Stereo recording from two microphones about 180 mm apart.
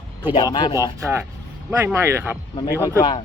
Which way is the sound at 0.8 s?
15° right (ahead or behind).